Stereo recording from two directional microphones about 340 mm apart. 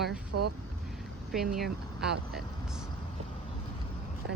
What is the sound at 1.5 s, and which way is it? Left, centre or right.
Speech, centre.